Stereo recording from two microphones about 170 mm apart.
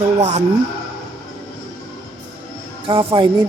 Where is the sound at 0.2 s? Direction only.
45° right (ahead or behind).